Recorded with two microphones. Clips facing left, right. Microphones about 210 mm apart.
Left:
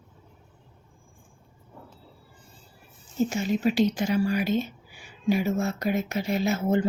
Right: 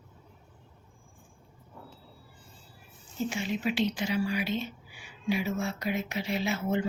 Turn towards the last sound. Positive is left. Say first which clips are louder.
# left 5 dB
turn(degrees=40)  # may be behind; listen again after turning